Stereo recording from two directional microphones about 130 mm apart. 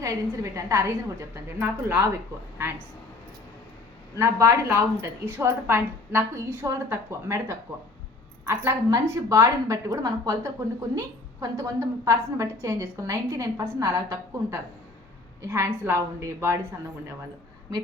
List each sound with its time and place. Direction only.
0.0 s a woman's voice: 25° right (ahead or behind)
4.2 s a woman's voice: 20° right (ahead or behind)